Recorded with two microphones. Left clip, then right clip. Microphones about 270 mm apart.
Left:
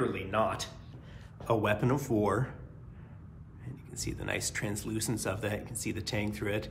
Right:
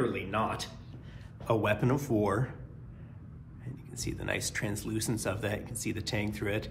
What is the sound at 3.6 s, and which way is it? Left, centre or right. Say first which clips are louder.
A man's voice: even; centre.